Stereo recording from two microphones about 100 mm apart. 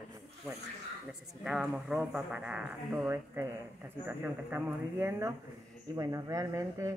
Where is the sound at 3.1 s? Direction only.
25° right (ahead or behind).